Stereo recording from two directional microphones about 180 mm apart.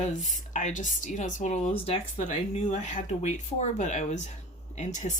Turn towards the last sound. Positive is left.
turn(degrees=40)  # may be behind; listen again after turning